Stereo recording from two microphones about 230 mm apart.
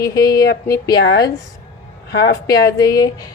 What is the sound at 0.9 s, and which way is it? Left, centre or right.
A woman's voice, left.